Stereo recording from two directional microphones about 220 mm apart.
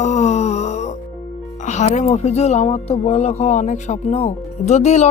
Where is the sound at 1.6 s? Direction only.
30° left (ahead or behind).